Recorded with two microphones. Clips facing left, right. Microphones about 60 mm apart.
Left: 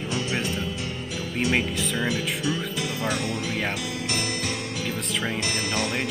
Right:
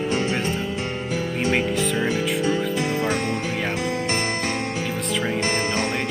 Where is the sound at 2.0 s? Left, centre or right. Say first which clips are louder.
Right 5 dB; right.